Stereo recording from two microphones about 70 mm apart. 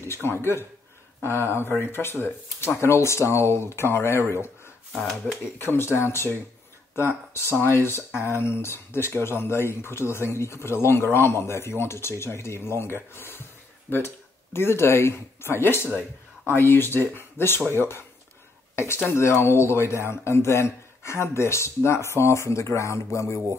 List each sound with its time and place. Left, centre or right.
0.0 s speech: left
4.9 s speech: centre
5.4 s speech: left
19.1 s speech: left